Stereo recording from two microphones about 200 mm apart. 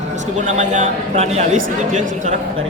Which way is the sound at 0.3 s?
35° right (ahead or behind).